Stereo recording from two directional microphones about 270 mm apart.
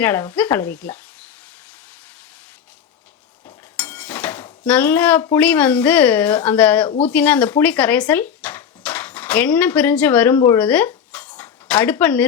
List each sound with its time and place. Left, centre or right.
0.0 s speech: centre
3.8 s dishes: centre
4.6 s speech: centre
6.8 s speech: left
7.1 s speech: centre
11.3 s a sound: centre